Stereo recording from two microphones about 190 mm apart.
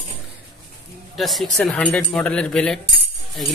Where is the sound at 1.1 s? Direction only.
Centre (ahead or behind).